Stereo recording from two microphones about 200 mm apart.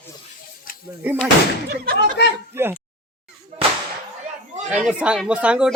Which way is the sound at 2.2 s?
60° left (ahead or behind).